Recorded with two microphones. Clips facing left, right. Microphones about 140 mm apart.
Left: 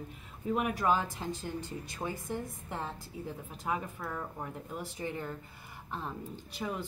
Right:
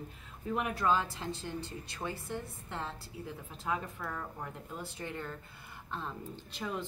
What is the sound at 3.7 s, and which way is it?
Speech, 10° left (ahead or behind).